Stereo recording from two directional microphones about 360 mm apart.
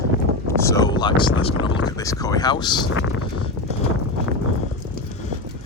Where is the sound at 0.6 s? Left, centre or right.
Centre.